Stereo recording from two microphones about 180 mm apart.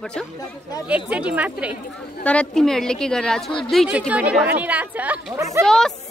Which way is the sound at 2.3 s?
5° left (ahead or behind).